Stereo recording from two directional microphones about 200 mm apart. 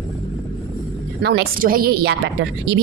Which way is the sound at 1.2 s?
55° right (ahead or behind).